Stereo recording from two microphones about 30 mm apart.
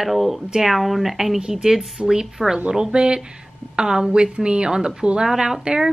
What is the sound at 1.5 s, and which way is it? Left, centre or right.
Speech, centre.